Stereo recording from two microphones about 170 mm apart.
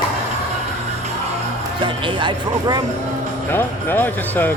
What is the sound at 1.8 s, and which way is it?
Speech, 30° right (ahead or behind).